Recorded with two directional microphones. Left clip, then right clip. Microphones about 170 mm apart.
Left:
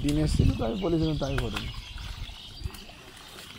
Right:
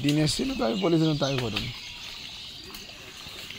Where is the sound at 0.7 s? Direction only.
25° right (ahead or behind).